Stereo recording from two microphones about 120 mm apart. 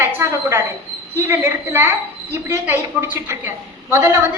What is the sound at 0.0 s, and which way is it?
A woman's voice, 20° right (ahead or behind).